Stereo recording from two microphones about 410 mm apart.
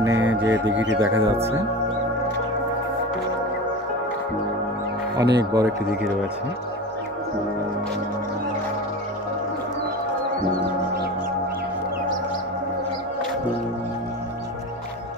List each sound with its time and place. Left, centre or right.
0.0 s music: centre
0.5 s music: right
0.9 s music: centre
5.1 s speech: centre